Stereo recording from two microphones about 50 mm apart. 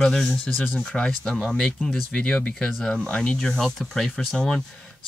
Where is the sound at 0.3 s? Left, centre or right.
Left.